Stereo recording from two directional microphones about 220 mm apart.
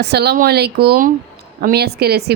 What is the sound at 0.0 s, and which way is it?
Speech, 45° right (ahead or behind).